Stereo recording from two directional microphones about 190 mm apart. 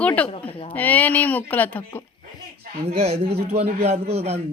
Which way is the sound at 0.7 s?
10° left (ahead or behind).